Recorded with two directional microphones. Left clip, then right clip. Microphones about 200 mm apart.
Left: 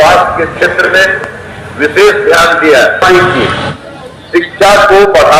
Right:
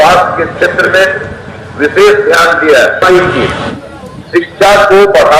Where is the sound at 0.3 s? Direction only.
40° right (ahead or behind).